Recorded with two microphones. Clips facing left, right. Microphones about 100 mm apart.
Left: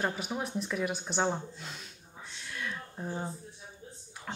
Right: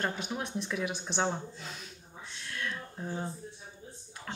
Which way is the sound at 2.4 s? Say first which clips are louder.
Right 1 dB; 5° left (ahead or behind).